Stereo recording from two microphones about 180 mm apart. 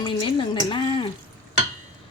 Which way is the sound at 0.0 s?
25° left (ahead or behind).